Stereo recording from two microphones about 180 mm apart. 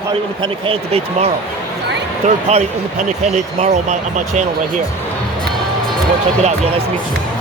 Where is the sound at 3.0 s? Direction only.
40° right (ahead or behind).